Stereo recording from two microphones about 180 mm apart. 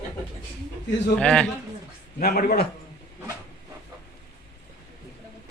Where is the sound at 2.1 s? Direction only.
55° left (ahead or behind).